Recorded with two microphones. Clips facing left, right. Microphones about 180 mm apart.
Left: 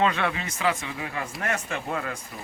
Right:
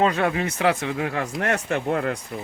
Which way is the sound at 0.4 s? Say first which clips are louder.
Right 5 dB; 65° right (ahead or behind).